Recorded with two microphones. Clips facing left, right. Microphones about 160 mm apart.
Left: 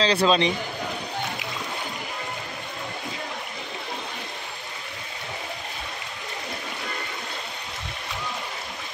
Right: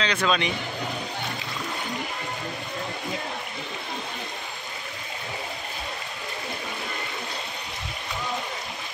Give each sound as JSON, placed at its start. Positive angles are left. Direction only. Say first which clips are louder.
{"t": 0.0, "sound": "speech", "louder": "left 4 dB", "side_deg": 30}